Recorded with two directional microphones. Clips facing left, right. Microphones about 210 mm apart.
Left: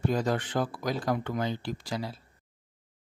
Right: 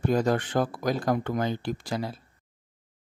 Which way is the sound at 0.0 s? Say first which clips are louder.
Right 4 dB; 50° right (ahead or behind).